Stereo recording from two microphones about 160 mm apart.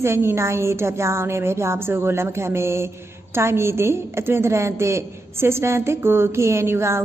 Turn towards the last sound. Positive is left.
turn(degrees=-15)  # may be behind; listen again after turning